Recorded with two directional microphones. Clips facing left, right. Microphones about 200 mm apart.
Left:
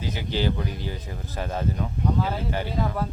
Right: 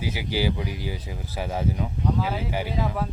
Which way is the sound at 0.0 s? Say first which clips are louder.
Right 1 dB; 10° right (ahead or behind).